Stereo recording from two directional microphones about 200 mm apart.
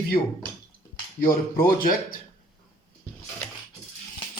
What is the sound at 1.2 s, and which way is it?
Speech, 45° left (ahead or behind).